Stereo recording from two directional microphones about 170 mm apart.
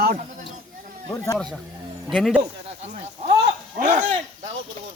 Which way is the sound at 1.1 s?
15° left (ahead or behind).